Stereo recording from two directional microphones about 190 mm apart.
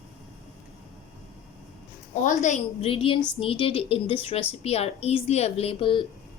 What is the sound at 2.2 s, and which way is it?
A woman's voice, 35° left (ahead or behind).